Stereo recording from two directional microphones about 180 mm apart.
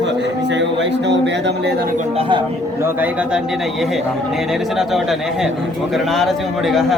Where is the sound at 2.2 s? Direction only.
25° right (ahead or behind).